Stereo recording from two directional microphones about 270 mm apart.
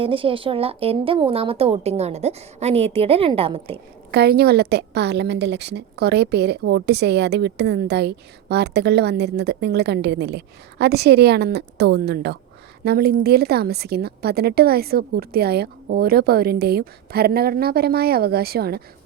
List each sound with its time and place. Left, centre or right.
0.0 s a woman's voice: centre
4.1 s a woman's voice: right